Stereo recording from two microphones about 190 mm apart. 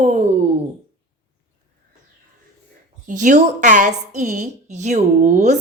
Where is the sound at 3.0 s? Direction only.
40° right (ahead or behind).